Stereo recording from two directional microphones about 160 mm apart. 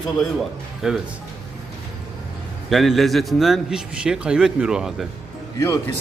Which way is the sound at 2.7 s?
Centre (ahead or behind).